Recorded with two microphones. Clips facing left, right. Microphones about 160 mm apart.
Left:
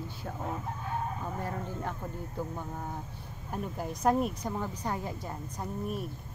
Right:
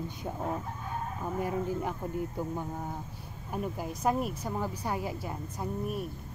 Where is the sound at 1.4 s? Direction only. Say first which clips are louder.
Right 5 dB; 10° right (ahead or behind).